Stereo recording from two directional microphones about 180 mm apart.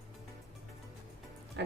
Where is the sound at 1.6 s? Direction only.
70° right (ahead or behind).